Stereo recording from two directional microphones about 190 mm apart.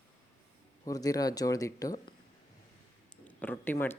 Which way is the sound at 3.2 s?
10° left (ahead or behind).